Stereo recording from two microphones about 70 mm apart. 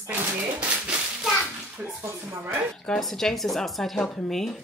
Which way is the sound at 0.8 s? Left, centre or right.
Centre.